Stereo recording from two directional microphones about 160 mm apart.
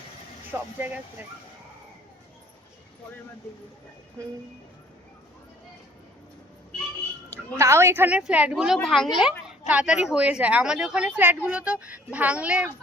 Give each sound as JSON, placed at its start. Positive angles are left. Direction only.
{"t": 0.5, "sound": "speech", "side_deg": -10}
{"t": 7.5, "sound": "a woman's voice", "side_deg": -15}